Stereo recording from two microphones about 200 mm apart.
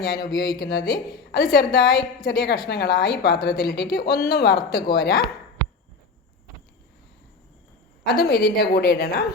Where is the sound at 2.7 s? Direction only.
55° left (ahead or behind).